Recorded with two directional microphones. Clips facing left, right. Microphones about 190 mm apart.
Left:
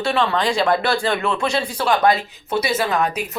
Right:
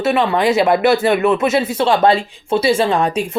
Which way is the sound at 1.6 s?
25° right (ahead or behind).